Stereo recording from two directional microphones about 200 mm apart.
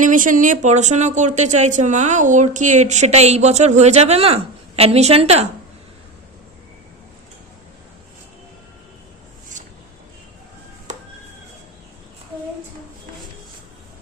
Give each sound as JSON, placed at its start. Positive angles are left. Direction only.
{"t": 0.0, "sound": "speech", "side_deg": -40}
{"t": 10.9, "sound": "chop", "side_deg": -35}